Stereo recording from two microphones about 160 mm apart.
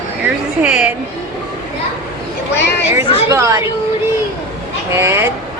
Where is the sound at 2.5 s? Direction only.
90° left.